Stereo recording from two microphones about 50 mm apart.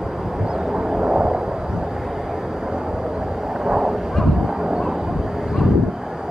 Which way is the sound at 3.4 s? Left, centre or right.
Centre.